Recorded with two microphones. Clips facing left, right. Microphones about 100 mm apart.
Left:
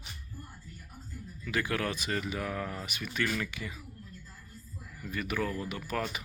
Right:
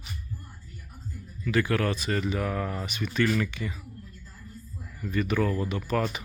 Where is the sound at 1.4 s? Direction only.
15° left (ahead or behind).